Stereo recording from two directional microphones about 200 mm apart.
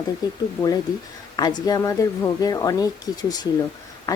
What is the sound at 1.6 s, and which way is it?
Speech, 15° left (ahead or behind).